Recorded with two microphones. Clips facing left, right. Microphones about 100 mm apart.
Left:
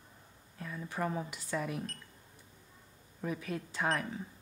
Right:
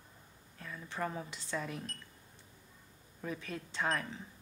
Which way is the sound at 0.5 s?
40° left (ahead or behind).